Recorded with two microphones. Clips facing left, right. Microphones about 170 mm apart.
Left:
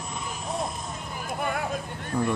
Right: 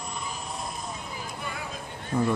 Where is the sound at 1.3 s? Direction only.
55° left (ahead or behind).